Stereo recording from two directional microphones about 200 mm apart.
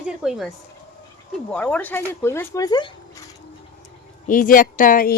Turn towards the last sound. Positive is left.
turn(degrees=45)  # may be behind; listen again after turning